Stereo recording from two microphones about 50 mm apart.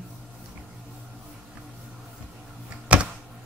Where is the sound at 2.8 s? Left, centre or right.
Right.